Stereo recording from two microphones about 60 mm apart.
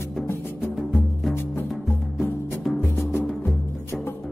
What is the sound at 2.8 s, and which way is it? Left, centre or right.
Music, left.